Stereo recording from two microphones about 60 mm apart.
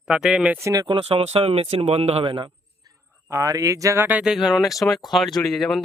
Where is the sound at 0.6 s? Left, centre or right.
Right.